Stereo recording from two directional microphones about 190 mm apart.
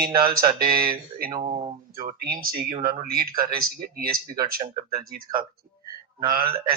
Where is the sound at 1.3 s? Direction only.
35° right (ahead or behind).